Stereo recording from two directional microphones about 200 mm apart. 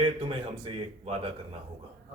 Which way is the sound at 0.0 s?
25° right (ahead or behind).